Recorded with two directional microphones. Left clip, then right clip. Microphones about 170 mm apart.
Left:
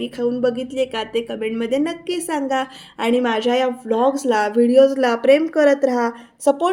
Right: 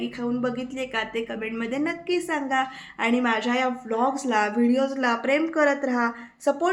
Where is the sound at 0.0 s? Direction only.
45° left (ahead or behind).